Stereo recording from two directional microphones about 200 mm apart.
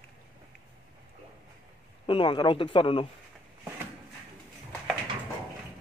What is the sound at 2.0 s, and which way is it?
Speech, 25° left (ahead or behind).